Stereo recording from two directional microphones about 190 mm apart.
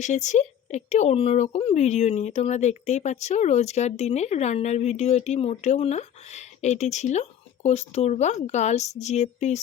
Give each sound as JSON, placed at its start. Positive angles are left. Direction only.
{"t": 0.0, "sound": "speech", "side_deg": 40}